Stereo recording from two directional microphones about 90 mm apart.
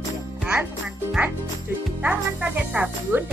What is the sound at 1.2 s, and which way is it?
Speech, 15° right (ahead or behind).